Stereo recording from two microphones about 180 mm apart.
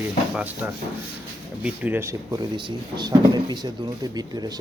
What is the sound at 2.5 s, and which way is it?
Speech, 25° right (ahead or behind).